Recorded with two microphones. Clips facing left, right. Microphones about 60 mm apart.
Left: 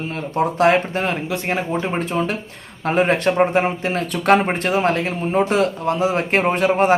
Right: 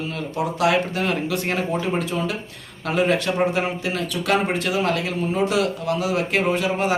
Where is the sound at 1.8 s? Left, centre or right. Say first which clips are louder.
Left 2 dB; left.